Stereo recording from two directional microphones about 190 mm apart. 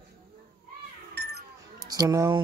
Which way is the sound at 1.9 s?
20° right (ahead or behind).